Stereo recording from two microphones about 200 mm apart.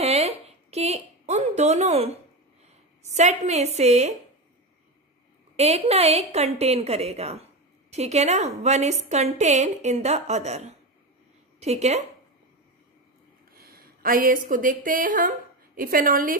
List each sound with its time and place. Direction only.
0.0 s a sound: 30° right (ahead or behind)
3.0 s a woman's voice: 35° right (ahead or behind)
5.6 s a woman's voice: 30° right (ahead or behind)
13.6 s speech: 45° right (ahead or behind)